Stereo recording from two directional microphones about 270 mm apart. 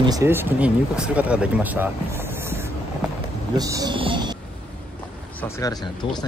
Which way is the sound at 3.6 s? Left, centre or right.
Centre.